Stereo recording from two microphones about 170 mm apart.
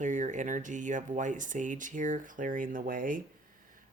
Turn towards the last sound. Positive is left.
turn(degrees=-50)  # may be behind; listen again after turning